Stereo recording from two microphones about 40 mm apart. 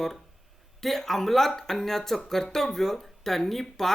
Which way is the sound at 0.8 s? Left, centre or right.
Centre.